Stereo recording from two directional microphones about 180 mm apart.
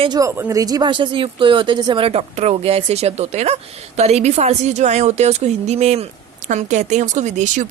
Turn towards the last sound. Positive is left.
turn(degrees=-45)  # may be behind; listen again after turning